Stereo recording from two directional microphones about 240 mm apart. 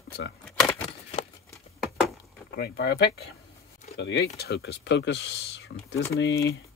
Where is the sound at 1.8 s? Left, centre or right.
Centre.